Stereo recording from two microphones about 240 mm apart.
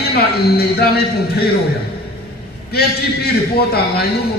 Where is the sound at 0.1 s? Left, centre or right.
Left.